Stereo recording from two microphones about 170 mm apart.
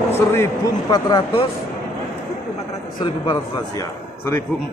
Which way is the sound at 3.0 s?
25° left (ahead or behind).